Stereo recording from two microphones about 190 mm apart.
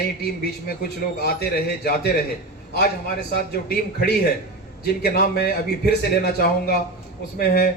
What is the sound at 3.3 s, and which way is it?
A man's voice, 55° left (ahead or behind).